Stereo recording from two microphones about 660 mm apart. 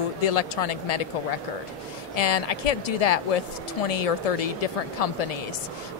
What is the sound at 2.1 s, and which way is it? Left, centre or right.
Speech, left.